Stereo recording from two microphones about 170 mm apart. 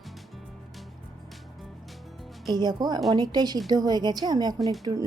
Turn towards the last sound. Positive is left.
turn(degrees=-20)  # may be behind; listen again after turning